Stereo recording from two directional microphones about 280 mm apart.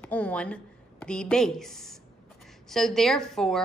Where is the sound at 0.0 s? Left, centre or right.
Centre.